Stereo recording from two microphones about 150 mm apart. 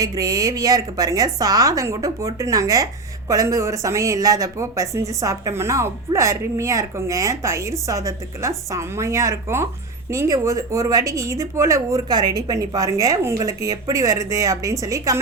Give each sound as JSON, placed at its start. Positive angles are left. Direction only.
{"t": 0.0, "sound": "a woman's voice", "side_deg": -25}